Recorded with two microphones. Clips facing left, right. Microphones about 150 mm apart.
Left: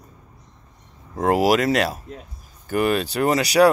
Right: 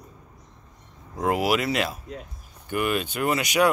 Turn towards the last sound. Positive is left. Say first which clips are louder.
# left 6 dB
turn(degrees=35)  # may be behind; listen again after turning